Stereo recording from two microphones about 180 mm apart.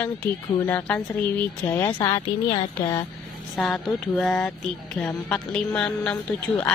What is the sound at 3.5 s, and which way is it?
Speech, centre (ahead or behind).